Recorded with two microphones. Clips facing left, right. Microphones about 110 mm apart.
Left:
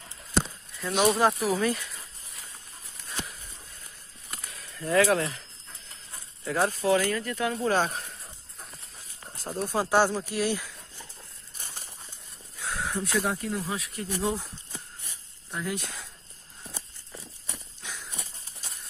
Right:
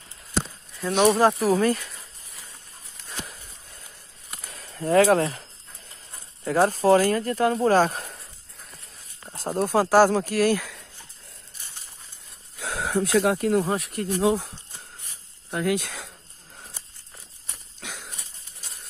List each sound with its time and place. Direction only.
0.9 s speech: 25° right (ahead or behind)
1.2 s speech: 35° right (ahead or behind)
4.5 s speech: 40° right (ahead or behind)
9.4 s speech: 50° right (ahead or behind)
9.8 s speech: 40° right (ahead or behind)
10.1 s speech: 55° right (ahead or behind)
12.5 s speech: 85° right; by 14.4 s 65° right (ahead or behind)
15.5 s speech: 90° right
17.7 s dog: 75° right (ahead or behind)